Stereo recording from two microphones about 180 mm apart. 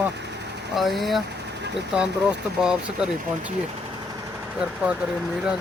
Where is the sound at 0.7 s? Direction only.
Centre (ahead or behind).